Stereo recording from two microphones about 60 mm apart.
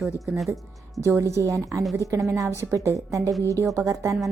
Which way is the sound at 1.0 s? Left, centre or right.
Right.